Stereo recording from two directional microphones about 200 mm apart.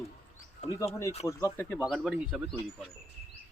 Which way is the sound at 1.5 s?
5° left (ahead or behind).